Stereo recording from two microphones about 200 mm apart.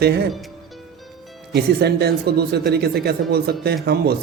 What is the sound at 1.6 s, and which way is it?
Speech, 55° right (ahead or behind).